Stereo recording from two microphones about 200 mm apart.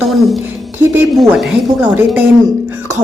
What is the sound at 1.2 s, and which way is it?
Speech, centre (ahead or behind).